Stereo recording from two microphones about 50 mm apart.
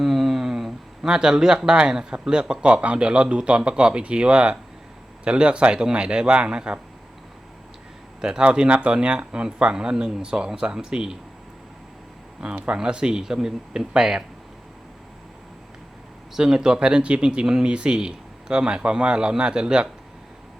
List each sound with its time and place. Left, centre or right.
0.0 s speech: centre
8.2 s speech: centre
12.4 s speech: centre
16.3 s speech: centre